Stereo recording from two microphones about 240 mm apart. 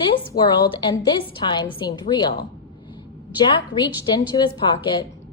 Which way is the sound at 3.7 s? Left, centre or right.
Centre.